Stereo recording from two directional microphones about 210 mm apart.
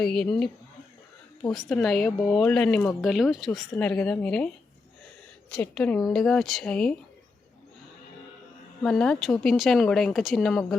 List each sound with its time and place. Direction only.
0.0 s speech: centre (ahead or behind)
1.5 s speech: centre (ahead or behind)
5.5 s speech: 5° left (ahead or behind)
8.8 s speech: 5° left (ahead or behind)